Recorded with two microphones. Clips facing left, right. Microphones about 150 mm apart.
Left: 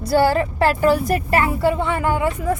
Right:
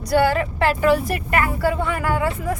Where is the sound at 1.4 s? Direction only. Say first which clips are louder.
Right 1 dB; 25° left (ahead or behind).